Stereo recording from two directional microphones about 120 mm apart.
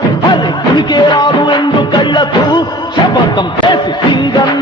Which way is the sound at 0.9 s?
40° left (ahead or behind).